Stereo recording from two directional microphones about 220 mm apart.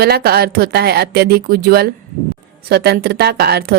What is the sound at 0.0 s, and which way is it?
A woman's voice, 45° right (ahead or behind).